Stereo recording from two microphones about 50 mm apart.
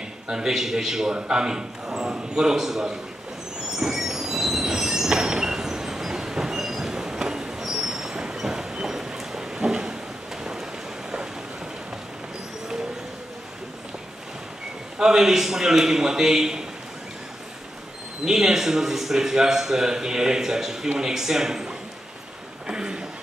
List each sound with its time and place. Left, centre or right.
0.3 s a man's voice: centre
3.7 s train: centre
15.0 s a man's voice: centre
18.2 s a man's voice: centre
22.7 s a sound: centre